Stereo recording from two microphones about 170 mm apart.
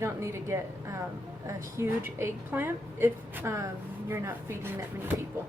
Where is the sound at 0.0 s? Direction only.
15° right (ahead or behind).